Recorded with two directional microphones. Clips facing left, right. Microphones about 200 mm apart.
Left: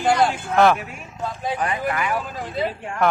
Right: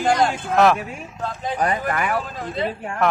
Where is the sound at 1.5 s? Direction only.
40° right (ahead or behind).